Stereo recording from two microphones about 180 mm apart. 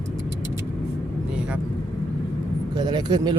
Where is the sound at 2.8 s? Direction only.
25° right (ahead or behind).